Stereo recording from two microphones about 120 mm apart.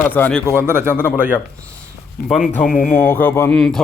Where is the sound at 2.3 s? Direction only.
Centre (ahead or behind).